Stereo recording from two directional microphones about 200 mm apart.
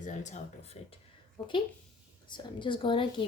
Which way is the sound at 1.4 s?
25° left (ahead or behind).